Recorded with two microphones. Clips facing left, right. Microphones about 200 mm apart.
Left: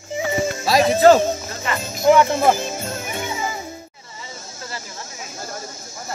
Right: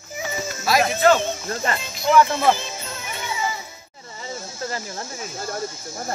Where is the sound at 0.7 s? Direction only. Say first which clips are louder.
Left 4 dB; 35° left (ahead or behind).